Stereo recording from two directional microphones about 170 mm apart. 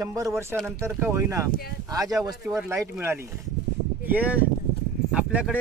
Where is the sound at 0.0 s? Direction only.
20° right (ahead or behind).